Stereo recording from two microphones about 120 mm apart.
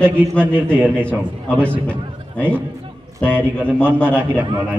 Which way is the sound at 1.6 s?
10° left (ahead or behind).